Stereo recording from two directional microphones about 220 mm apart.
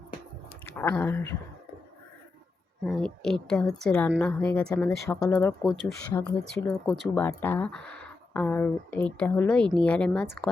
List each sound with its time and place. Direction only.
0.6 s speech: 10° left (ahead or behind)
2.8 s speech: centre (ahead or behind)
6.5 s speech: 5° left (ahead or behind)